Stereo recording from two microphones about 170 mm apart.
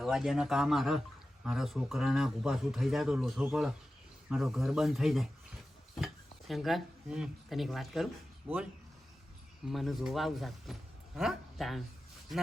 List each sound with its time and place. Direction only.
0.0 s a man's voice: centre (ahead or behind)
9.6 s speech: centre (ahead or behind)